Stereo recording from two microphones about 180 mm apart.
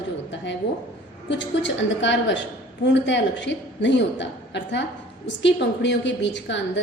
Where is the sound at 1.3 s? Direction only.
85° left.